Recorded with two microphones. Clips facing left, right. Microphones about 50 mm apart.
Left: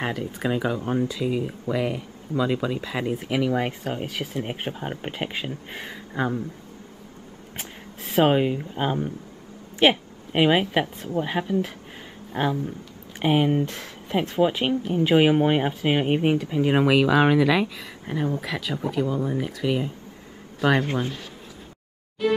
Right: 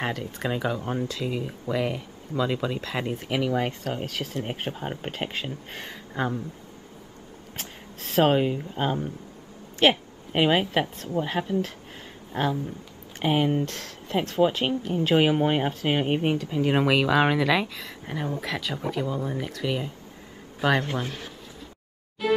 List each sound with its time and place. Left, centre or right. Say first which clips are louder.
0.0 s speech: left 2 dB; centre
0.7 s speech: left 4 dB; centre
1.2 s speech: left 4 dB; centre
7.5 s a woman's voice: left 2 dB; centre
20.8 s speech: left 4 dB; left
22.2 s music: left 1 dB; centre